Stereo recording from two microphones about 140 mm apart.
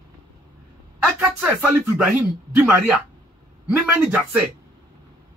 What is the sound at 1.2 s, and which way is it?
Speech, 10° right (ahead or behind).